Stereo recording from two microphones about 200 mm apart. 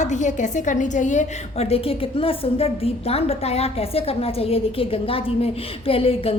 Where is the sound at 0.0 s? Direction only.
40° left (ahead or behind).